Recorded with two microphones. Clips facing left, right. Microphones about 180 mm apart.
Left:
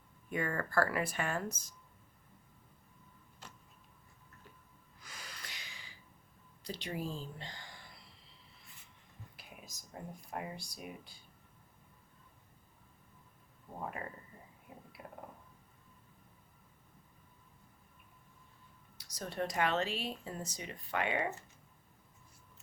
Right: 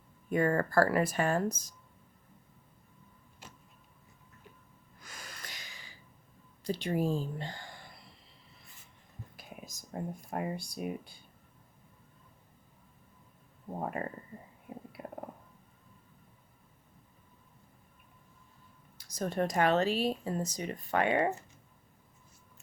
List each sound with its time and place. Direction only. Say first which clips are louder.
0.3 s speech: right 8 dB; 40° right (ahead or behind)
5.0 s gasp: right 3 dB; 45° right (ahead or behind)
6.7 s a woman's voice: right 9 dB; 50° right (ahead or behind)
9.9 s a woman's voice: right 7 dB; 60° right (ahead or behind)
15.0 s a sound: right 6 dB; 50° right (ahead or behind)
18.9 s speech: right 7 dB; 50° right (ahead or behind)